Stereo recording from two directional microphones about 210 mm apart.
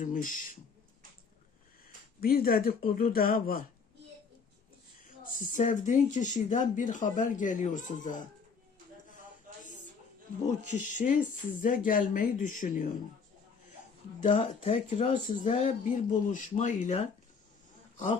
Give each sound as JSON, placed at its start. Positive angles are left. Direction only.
{"t": 0.0, "sound": "speech", "side_deg": 40}
{"t": 2.2, "sound": "speech", "side_deg": 45}
{"t": 5.2, "sound": "speech", "side_deg": 40}
{"t": 10.9, "sound": "speech", "side_deg": 40}
{"t": 14.2, "sound": "speech", "side_deg": 35}
{"t": 17.9, "sound": "speech", "side_deg": 35}